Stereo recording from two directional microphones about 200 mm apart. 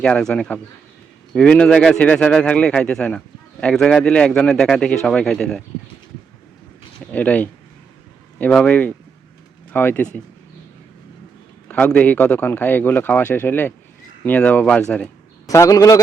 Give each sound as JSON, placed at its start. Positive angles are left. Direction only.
{"t": 0.0, "sound": "a man's voice", "side_deg": 5}
{"t": 7.1, "sound": "a man's voice", "side_deg": 5}
{"t": 11.7, "sound": "a man's voice", "side_deg": 5}
{"t": 15.4, "sound": "a man's voice", "side_deg": 15}